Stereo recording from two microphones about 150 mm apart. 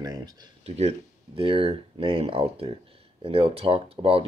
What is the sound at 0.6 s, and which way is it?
Speech, 45° right (ahead or behind).